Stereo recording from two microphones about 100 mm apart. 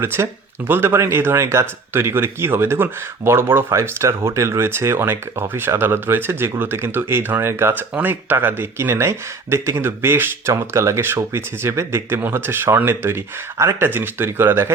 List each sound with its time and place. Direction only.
0.0 s speech: 25° right (ahead or behind)